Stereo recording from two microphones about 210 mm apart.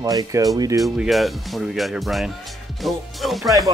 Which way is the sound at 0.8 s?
Centre (ahead or behind).